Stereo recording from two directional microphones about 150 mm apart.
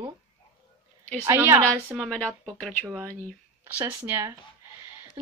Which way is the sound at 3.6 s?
15° right (ahead or behind).